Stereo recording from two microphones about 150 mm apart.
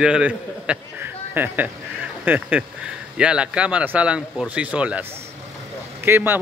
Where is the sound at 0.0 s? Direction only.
5° right (ahead or behind).